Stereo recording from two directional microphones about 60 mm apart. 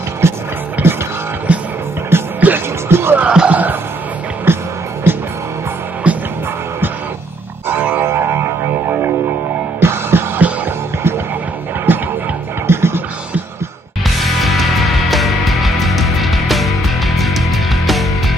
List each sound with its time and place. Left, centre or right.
0.2 s music: right
0.8 s music: right
2.1 s music: right
3.2 s music: centre
4.5 s music: right
6.0 s music: right
7.6 s music: right
11.9 s music: right
14.0 s music: centre